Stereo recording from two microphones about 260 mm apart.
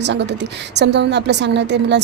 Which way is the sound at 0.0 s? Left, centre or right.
Right.